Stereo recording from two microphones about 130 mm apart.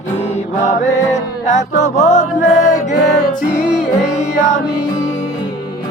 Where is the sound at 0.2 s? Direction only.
60° left (ahead or behind).